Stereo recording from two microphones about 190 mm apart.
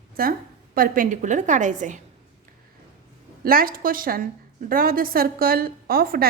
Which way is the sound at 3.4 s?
50° right (ahead or behind).